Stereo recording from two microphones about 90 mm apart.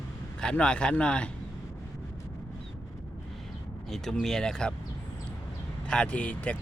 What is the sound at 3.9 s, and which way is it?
Speech, 5° left (ahead or behind).